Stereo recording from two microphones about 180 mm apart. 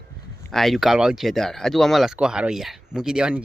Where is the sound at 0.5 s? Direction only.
Centre (ahead or behind).